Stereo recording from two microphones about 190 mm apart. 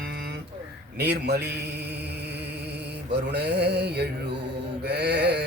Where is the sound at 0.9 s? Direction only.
60° right (ahead or behind).